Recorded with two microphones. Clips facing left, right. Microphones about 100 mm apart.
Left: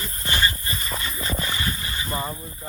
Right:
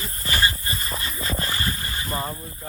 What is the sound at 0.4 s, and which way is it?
Dog, 30° right (ahead or behind).